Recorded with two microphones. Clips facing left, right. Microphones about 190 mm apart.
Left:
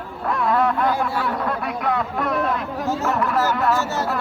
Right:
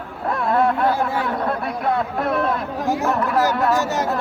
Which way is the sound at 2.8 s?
15° right (ahead or behind).